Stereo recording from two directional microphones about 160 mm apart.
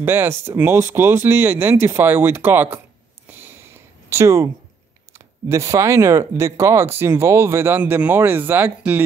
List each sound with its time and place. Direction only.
0.0 s speech: 15° right (ahead or behind)
3.3 s a sound: 15° right (ahead or behind)
5.1 s speech: 15° right (ahead or behind)